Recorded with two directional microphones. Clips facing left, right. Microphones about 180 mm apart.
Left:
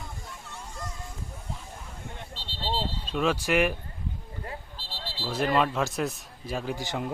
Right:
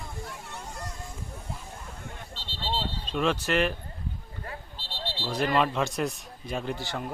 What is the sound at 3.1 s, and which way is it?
Speech, 5° left (ahead or behind).